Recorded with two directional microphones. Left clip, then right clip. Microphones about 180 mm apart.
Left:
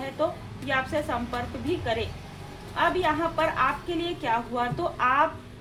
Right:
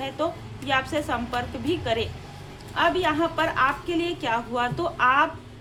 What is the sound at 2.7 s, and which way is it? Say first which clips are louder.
A woman's voice: right 2 dB; 30° right (ahead or behind).